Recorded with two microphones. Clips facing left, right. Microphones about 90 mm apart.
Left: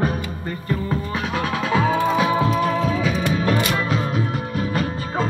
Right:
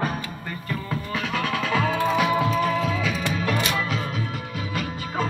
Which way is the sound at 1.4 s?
25° left (ahead or behind).